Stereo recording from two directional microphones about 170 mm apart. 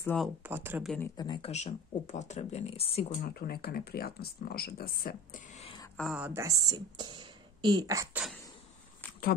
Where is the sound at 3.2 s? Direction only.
60° left (ahead or behind); by 5.7 s 45° left (ahead or behind).